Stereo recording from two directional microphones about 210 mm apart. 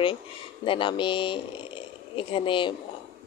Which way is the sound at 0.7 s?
25° left (ahead or behind).